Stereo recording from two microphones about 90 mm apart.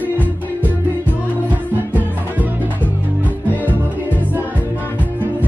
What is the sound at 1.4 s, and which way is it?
Music, 20° right (ahead or behind).